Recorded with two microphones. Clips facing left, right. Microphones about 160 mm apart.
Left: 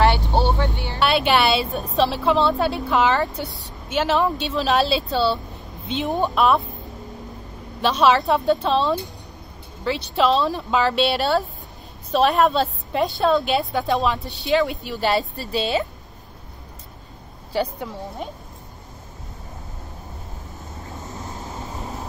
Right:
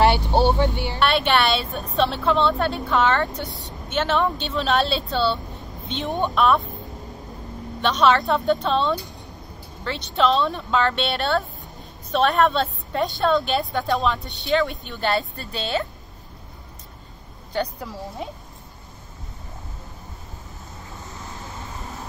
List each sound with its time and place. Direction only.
0.0 s vehicle: 15° right (ahead or behind)
0.9 s speech: 5° left (ahead or behind)
7.8 s speech: 10° left (ahead or behind)
17.5 s speech: 5° left (ahead or behind)